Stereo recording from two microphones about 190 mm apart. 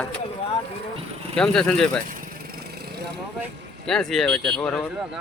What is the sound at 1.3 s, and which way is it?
Speech, 5° left (ahead or behind).